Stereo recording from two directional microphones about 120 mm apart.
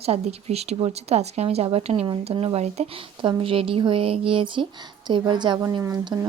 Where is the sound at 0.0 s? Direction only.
60° right (ahead or behind).